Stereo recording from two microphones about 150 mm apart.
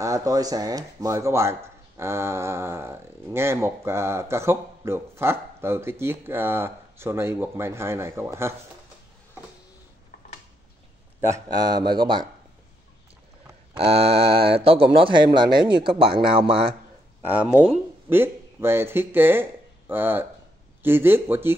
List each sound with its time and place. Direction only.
0.0 s speech: 20° right (ahead or behind)
11.1 s speech: 20° right (ahead or behind)
13.7 s speech: 40° right (ahead or behind)
17.3 s speech: 10° right (ahead or behind)